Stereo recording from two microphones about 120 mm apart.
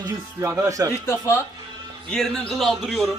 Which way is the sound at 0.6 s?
25° right (ahead or behind).